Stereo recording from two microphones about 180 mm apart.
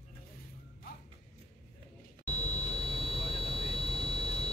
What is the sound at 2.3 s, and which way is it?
Buzzer, 40° left (ahead or behind).